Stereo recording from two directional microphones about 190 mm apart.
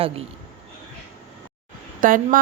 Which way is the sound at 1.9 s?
45° right (ahead or behind).